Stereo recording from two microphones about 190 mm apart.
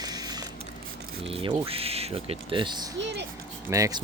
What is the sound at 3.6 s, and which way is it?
Speech, 15° right (ahead or behind).